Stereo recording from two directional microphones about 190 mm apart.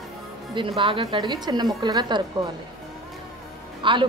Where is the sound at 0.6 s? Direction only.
25° right (ahead or behind).